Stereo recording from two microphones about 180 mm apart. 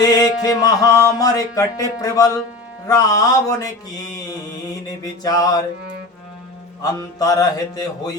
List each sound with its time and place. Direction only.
0.0 s music: 20° left (ahead or behind)
5.2 s music: 20° left (ahead or behind)
7.2 s music: 20° left (ahead or behind)